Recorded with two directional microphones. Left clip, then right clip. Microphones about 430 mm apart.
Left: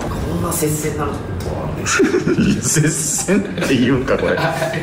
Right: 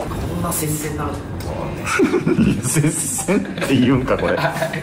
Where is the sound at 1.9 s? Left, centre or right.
Centre.